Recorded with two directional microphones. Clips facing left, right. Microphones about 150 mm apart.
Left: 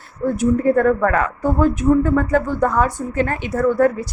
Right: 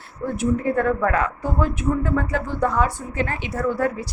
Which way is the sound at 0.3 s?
45° left (ahead or behind).